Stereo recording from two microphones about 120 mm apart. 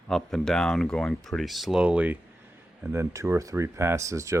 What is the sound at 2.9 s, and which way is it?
Speech, 25° right (ahead or behind).